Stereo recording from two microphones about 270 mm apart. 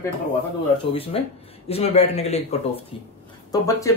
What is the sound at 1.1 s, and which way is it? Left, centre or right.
A man's voice, left.